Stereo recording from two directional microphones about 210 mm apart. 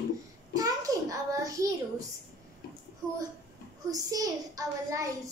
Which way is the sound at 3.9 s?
15° right (ahead or behind).